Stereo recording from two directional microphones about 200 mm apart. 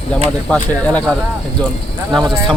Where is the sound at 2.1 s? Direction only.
Centre (ahead or behind).